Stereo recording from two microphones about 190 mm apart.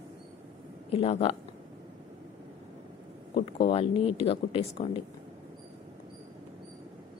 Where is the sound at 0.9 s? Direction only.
30° left (ahead or behind).